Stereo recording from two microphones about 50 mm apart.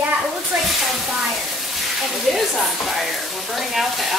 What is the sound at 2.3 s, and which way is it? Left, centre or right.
Speech, centre.